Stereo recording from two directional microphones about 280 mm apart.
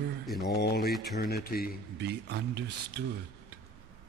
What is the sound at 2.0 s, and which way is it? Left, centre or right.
Speech, right.